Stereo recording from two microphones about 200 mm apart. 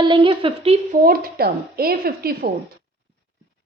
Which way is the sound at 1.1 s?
50° right (ahead or behind).